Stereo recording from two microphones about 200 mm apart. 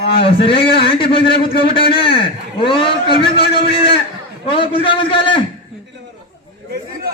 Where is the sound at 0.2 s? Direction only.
25° left (ahead or behind).